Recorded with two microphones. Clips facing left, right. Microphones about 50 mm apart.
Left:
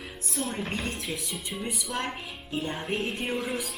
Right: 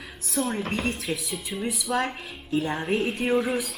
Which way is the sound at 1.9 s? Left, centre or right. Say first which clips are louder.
Right 8 dB; right.